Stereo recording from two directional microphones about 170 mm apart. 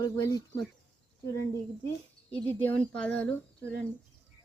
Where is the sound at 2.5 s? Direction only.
10° left (ahead or behind).